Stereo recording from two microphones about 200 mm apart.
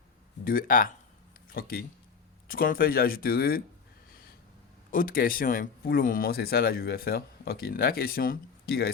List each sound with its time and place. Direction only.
0.4 s speech: 45° left (ahead or behind)
4.9 s speech: 45° left (ahead or behind)